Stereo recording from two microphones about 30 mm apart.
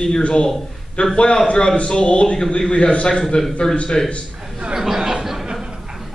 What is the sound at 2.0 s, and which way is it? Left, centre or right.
A man's voice, left.